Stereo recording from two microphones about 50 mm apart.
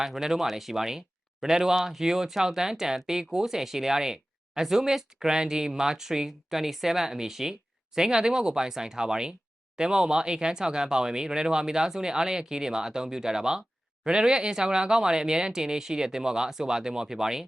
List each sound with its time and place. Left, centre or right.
0.0 s speech: centre